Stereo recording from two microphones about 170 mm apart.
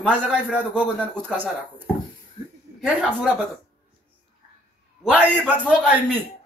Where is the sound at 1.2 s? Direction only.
10° right (ahead or behind).